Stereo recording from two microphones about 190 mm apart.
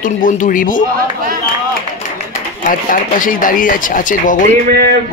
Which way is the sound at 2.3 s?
45° left (ahead or behind).